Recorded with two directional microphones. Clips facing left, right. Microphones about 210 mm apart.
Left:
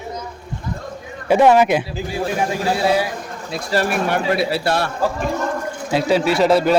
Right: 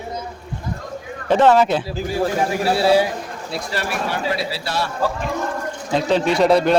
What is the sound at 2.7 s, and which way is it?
Speech, 30° right (ahead or behind).